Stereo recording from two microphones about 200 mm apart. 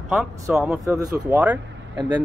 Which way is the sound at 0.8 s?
15° right (ahead or behind).